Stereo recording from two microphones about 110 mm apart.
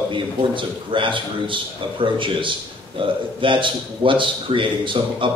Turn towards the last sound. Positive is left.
turn(degrees=-50)  # may be behind; listen again after turning